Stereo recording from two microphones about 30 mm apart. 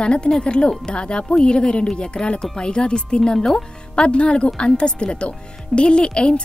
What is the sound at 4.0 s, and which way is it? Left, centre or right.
A woman's voice, left.